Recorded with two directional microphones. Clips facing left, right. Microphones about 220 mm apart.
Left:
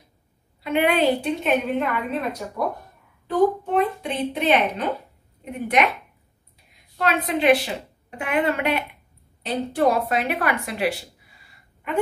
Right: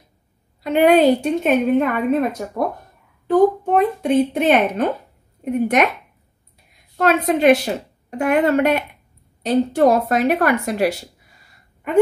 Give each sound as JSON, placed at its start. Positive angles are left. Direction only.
{"t": 0.6, "sound": "a woman's voice", "side_deg": -40}
{"t": 7.0, "sound": "a woman's voice", "side_deg": -45}